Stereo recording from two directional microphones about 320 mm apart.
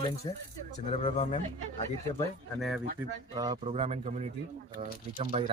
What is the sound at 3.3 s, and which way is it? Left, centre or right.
Speech, centre.